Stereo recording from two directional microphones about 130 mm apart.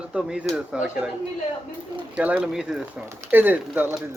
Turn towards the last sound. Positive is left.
turn(degrees=-15)  # may be behind; listen again after turning